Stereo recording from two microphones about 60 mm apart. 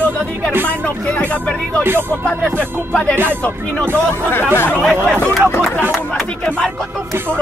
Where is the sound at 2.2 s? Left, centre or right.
Left.